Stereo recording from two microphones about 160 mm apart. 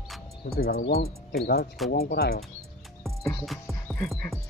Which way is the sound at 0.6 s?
75° left (ahead or behind).